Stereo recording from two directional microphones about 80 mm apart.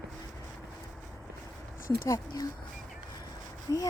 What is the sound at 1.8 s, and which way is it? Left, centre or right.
Speech, left.